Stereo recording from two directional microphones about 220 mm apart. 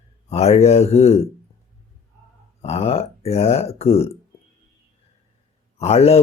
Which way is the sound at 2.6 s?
30° left (ahead or behind).